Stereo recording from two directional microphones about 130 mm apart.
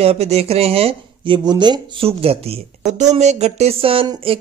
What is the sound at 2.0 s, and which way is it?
Speech, 50° right (ahead or behind).